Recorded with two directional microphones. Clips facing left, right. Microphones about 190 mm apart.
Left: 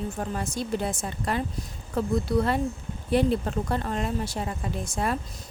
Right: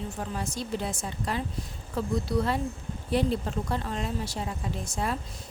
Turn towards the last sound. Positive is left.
turn(degrees=55)  # may be behind; listen again after turning